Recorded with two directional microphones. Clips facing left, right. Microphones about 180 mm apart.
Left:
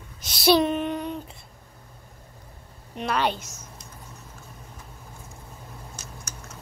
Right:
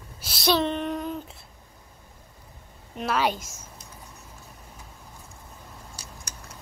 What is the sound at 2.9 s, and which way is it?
Speech, 5° right (ahead or behind).